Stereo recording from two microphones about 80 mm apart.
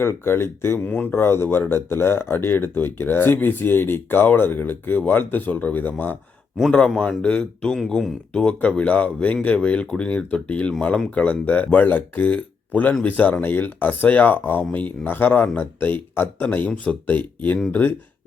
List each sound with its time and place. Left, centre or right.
0.0 s speech: left
0.8 s speech: centre
1.1 s speech: left
6.6 s speech: centre